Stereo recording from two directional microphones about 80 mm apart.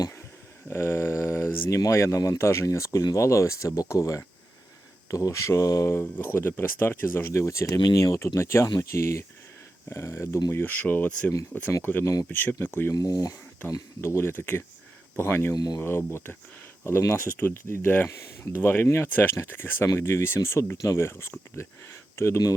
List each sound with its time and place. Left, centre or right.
0.7 s a sound: left
1.8 s speech: left
5.9 s speech: left
10.5 s speech: left
12.9 s speech: left
14.0 s speech: left
15.5 s speech: left
15.8 s speech: left